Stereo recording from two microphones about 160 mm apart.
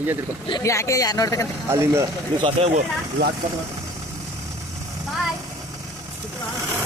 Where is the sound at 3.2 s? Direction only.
75° right (ahead or behind).